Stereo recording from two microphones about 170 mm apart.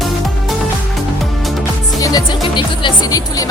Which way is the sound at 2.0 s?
25° left (ahead or behind).